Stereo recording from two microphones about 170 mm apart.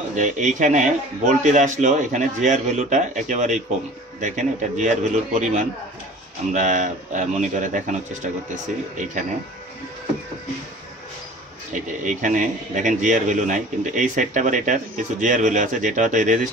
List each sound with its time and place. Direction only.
0.1 s a man's voice: 45° right (ahead or behind)
8.9 s a man's voice: 50° right (ahead or behind)
11.7 s a man's voice: 50° right (ahead or behind)